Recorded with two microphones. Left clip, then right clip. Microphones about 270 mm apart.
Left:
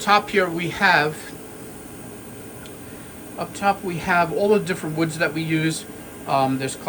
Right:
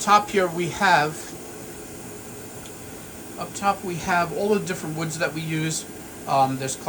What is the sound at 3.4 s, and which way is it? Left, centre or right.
Speech, centre.